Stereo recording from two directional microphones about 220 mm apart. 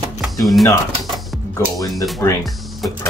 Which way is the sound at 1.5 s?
15° left (ahead or behind).